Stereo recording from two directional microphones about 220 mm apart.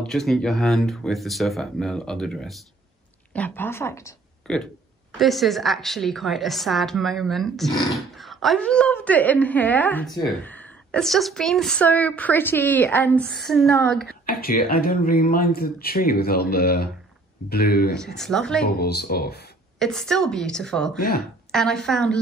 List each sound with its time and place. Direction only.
0.0 s a woman's voice: centre (ahead or behind)
14.0 s speech: 40° left (ahead or behind)
17.9 s a woman's voice: centre (ahead or behind)
18.7 s speech: 45° left (ahead or behind)
19.8 s a woman's voice: centre (ahead or behind)